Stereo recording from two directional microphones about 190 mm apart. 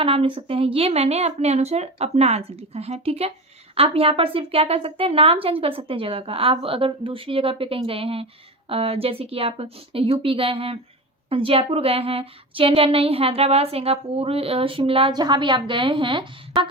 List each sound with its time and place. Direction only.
0.0 s a woman's voice: 30° right (ahead or behind)